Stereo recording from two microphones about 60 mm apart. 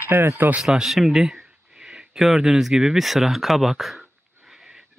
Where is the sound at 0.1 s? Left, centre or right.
Right.